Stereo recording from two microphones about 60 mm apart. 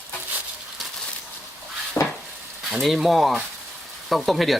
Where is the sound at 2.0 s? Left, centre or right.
Left.